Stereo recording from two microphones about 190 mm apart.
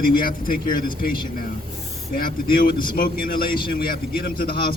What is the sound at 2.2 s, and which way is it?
A man's voice, 50° left (ahead or behind).